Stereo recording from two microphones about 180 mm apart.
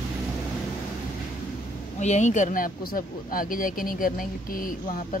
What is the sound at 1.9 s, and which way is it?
Speech, 40° left (ahead or behind).